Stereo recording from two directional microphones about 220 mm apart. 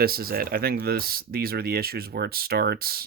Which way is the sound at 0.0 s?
45° right (ahead or behind).